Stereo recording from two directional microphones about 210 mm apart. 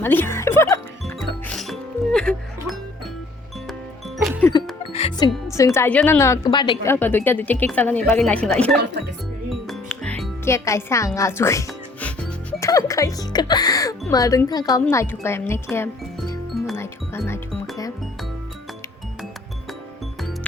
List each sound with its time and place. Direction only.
0.0 s speech: 10° left (ahead or behind)
1.0 s music: centre (ahead or behind)
4.9 s music: 25° left (ahead or behind)
5.5 s a woman's voice: 15° left (ahead or behind)
9.5 s music: centre (ahead or behind)
14.1 s a woman's voice: 15° left (ahead or behind)